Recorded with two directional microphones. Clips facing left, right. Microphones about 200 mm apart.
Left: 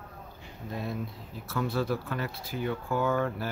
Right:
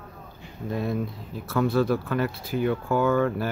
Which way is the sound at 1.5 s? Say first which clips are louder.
Right 7 dB; 60° right (ahead or behind).